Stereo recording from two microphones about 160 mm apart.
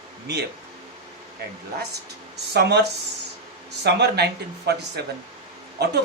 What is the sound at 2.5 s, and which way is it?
A man's voice, 90° right.